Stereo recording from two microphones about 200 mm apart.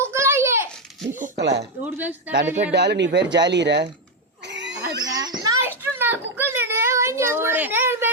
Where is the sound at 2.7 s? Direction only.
60° right (ahead or behind).